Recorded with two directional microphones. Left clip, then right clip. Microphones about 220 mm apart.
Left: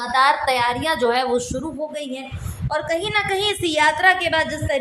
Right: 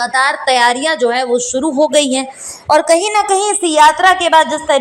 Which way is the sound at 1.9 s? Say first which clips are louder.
Right 16 dB; 40° right (ahead or behind).